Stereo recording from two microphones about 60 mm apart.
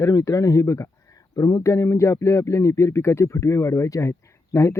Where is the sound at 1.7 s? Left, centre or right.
Left.